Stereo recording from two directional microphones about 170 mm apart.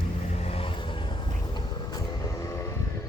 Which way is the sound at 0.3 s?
35° left (ahead or behind).